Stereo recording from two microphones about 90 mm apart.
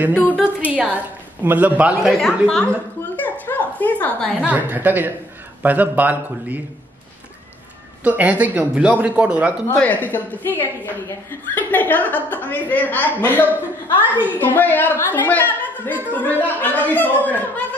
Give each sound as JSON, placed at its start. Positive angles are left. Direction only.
{"t": 0.1, "sound": "a woman's voice", "side_deg": 15}
{"t": 0.7, "sound": "a woman's voice", "side_deg": -15}
{"t": 2.4, "sound": "a woman's voice", "side_deg": 10}
{"t": 3.2, "sound": "a sound", "side_deg": 20}
{"t": 4.5, "sound": "speech", "side_deg": -20}
{"t": 8.0, "sound": "a woman's voice", "side_deg": -15}
{"t": 9.7, "sound": "a woman's voice", "side_deg": 20}